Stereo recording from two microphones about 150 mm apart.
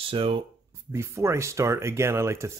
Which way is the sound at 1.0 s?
20° right (ahead or behind).